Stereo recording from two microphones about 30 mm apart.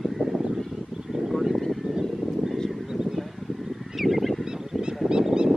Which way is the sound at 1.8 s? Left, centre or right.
Centre.